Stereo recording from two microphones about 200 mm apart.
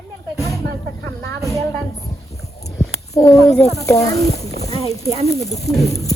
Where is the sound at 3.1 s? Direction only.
15° left (ahead or behind).